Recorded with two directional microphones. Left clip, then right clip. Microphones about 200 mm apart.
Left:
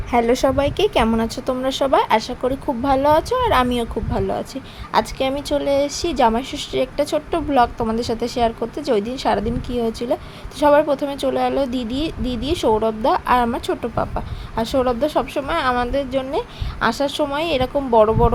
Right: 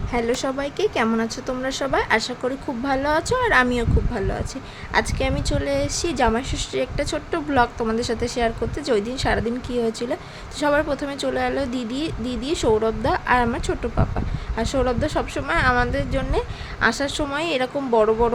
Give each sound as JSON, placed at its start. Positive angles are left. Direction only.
{"t": 0.1, "sound": "a woman's voice", "side_deg": 20}